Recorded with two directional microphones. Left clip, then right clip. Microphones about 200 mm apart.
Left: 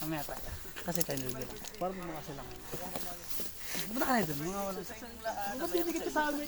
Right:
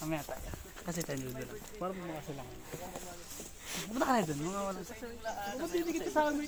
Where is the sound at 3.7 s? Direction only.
15° right (ahead or behind).